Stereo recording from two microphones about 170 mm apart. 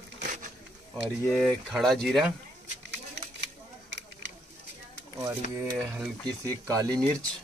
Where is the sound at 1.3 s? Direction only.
Centre (ahead or behind).